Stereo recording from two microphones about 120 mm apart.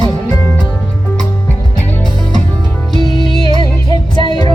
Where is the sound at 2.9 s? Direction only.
40° right (ahead or behind).